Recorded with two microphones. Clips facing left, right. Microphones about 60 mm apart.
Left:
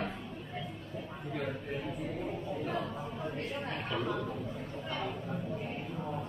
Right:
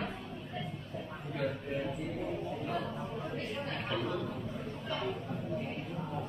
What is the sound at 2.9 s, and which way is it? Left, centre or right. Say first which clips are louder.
Choir: even; centre.